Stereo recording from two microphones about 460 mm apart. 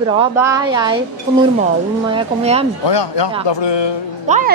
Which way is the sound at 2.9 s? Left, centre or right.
Left.